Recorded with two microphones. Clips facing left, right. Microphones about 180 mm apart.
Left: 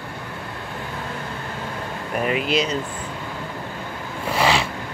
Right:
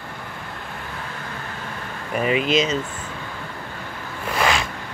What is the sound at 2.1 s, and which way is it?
Speech, 5° right (ahead or behind).